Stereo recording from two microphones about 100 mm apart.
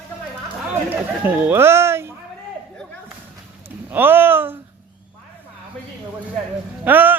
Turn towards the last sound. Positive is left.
turn(degrees=-20)  # may be behind; listen again after turning